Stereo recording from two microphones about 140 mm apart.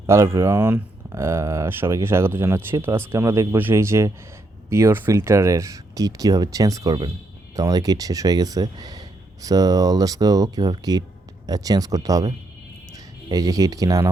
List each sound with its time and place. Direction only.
0.1 s speech: 20° right (ahead or behind)